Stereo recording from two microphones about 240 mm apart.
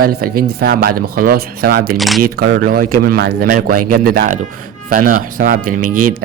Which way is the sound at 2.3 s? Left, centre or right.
Right.